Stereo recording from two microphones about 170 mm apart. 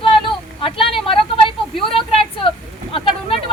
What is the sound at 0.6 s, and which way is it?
A woman's voice, 30° left (ahead or behind).